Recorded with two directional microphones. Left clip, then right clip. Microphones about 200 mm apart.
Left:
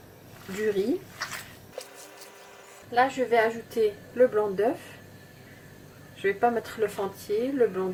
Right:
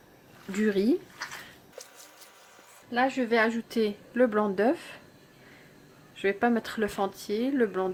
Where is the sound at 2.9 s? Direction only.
45° right (ahead or behind).